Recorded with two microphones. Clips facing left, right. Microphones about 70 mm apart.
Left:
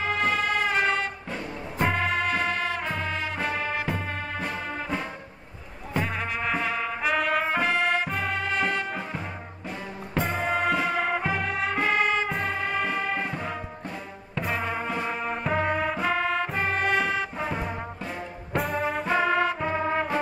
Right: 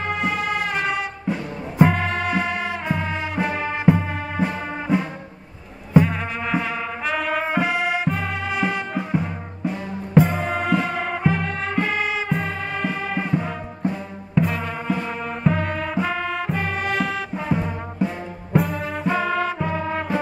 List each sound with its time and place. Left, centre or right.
0.0 s music: centre
19.7 s music: left